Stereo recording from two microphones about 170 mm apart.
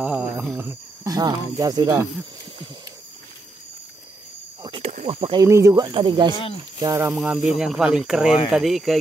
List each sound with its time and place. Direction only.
0.0 s speech: 5° right (ahead or behind)
4.6 s snake: 30° right (ahead or behind)
5.0 s speech: 30° right (ahead or behind)
5.5 s speech: 15° right (ahead or behind)
5.9 s speech: 30° right (ahead or behind)
7.1 s speech: 5° right (ahead or behind)